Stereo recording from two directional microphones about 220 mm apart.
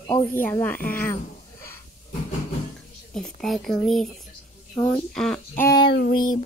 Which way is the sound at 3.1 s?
Centre (ahead or behind).